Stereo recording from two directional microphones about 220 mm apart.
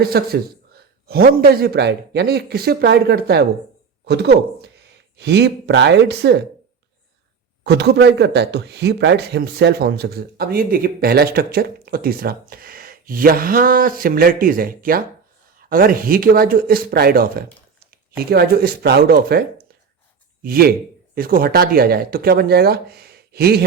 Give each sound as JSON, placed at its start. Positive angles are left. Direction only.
{"t": 0.0, "sound": "speech", "side_deg": -45}
{"t": 7.6, "sound": "speech", "side_deg": -50}